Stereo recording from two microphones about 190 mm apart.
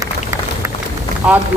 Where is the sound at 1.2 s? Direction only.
5° right (ahead or behind).